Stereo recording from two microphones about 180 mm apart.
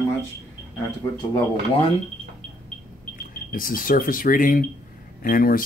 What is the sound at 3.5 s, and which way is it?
Speech, 50° left (ahead or behind).